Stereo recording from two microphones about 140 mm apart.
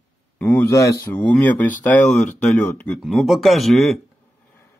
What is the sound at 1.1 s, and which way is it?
Speech, 10° left (ahead or behind).